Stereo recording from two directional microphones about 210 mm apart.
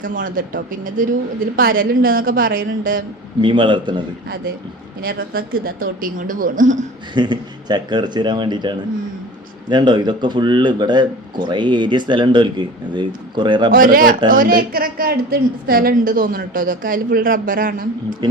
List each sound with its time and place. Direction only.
0.0 s a woman's voice: 40° right (ahead or behind)
3.4 s speech: 20° right (ahead or behind)
5.0 s speech: 45° right (ahead or behind)
7.1 s speech: 20° right (ahead or behind)
13.7 s a woman's voice: 40° right (ahead or behind)
18.2 s speech: 20° right (ahead or behind)